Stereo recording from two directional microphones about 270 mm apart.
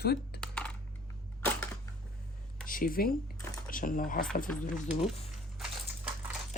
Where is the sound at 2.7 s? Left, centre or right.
Left.